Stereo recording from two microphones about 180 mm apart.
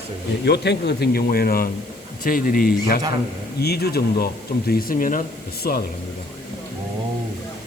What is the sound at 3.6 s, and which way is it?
A man's voice, 65° left (ahead or behind).